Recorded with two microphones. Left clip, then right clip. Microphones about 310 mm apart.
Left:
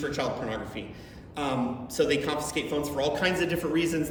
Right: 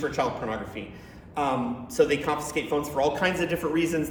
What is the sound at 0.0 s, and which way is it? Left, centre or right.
Speech, centre.